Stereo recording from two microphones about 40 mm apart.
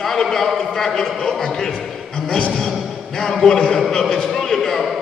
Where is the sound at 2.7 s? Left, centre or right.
Centre.